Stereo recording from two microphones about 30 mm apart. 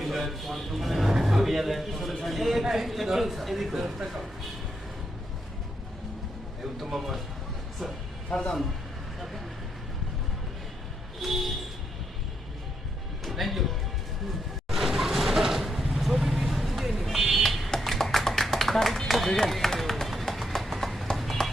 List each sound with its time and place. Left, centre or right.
0.0 s a man's voice: centre
3.8 s speech: centre
6.9 s speech: centre
8.3 s speech: left
11.2 s speech: centre
13.2 s music: centre
14.7 s vehicle: centre
17.7 s tap: centre
18.4 s clapping: centre
19.0 s run: centre
20.6 s clip-clop: centre
21.4 s music: left